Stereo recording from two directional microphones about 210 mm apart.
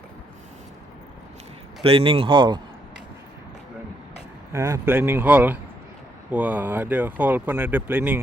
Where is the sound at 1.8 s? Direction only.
25° right (ahead or behind).